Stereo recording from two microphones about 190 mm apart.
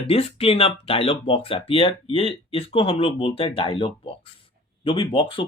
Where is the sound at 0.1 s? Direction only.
30° left (ahead or behind).